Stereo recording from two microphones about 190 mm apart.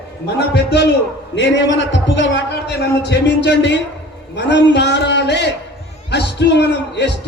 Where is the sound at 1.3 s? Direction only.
70° left (ahead or behind).